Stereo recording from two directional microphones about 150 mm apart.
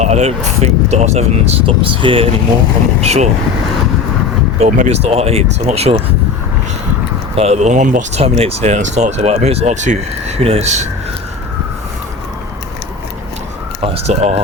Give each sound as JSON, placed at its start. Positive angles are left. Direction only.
{"t": 0.0, "sound": "speech", "side_deg": -50}
{"t": 4.6, "sound": "speech", "side_deg": -45}
{"t": 7.3, "sound": "speech", "side_deg": -45}
{"t": 13.8, "sound": "speech", "side_deg": -45}